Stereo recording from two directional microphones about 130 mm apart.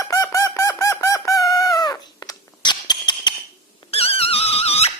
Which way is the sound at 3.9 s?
50° left (ahead or behind).